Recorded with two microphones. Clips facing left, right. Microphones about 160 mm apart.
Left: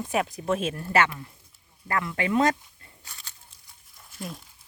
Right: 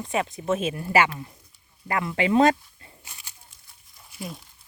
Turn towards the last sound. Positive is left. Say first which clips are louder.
# right 1 dB
turn(degrees=0)  # may be behind; listen again after turning